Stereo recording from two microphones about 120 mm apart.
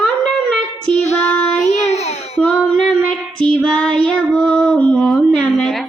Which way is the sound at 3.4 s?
10° left (ahead or behind).